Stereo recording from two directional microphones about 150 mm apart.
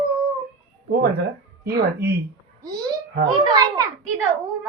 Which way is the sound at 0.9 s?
90° right.